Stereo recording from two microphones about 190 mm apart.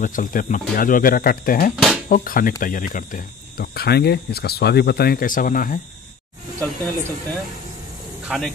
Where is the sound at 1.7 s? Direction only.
Centre (ahead or behind).